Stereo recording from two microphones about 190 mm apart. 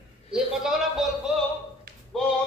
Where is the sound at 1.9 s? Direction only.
50° right (ahead or behind).